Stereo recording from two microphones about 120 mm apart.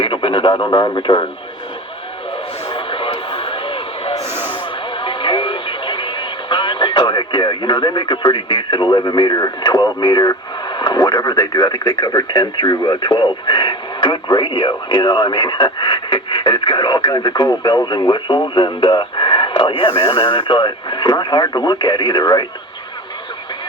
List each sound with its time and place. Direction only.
0.0 s speech: 45° left (ahead or behind)
2.6 s radio: 45° left (ahead or behind)
4.9 s speech: 45° left (ahead or behind)
20.1 s speech: 35° left (ahead or behind)